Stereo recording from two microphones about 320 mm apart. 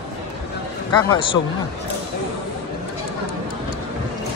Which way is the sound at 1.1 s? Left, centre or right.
Centre.